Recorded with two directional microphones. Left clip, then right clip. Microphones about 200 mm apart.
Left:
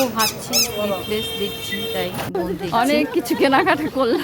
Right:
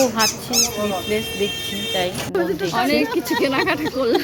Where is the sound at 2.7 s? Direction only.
15° left (ahead or behind).